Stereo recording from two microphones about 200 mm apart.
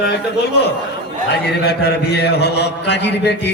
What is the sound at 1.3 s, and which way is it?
A man's voice, 55° left (ahead or behind).